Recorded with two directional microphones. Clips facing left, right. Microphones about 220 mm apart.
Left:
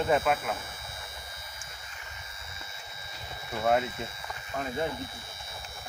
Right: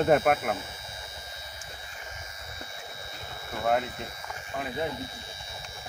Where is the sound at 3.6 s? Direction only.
Centre (ahead or behind).